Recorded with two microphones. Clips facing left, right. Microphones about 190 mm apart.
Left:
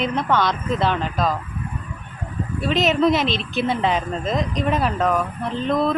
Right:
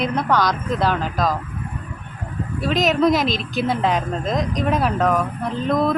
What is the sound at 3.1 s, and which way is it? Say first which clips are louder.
Speech: right 1 dB; 40° right (ahead or behind).